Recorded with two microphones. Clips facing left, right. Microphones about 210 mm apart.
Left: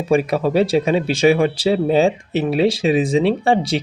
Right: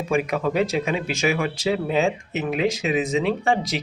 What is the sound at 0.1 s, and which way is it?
Speech, 35° left (ahead or behind).